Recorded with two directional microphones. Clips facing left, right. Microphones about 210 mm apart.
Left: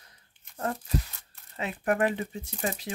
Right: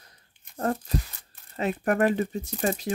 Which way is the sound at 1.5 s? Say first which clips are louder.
Right 3 dB; 40° right (ahead or behind).